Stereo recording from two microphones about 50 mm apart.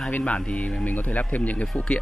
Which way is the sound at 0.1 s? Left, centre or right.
Left.